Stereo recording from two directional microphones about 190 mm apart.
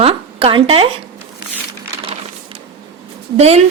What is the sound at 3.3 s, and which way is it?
Speech, 35° right (ahead or behind).